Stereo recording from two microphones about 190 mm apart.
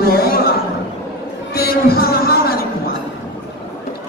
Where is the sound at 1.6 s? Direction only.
55° left (ahead or behind).